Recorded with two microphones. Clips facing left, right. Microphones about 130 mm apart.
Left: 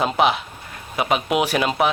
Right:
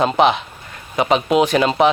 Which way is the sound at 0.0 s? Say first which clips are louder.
Right 4 dB; 5° left (ahead or behind).